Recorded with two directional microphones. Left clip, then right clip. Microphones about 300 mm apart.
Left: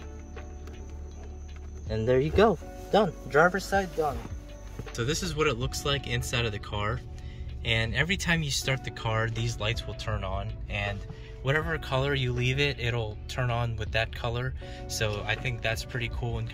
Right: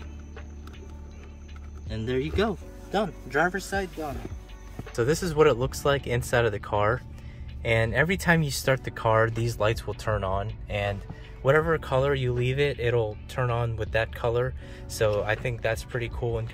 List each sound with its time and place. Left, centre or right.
1.9 s speech: centre
4.9 s speech: centre